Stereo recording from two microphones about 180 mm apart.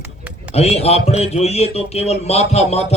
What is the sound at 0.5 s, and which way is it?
Speech, 35° left (ahead or behind).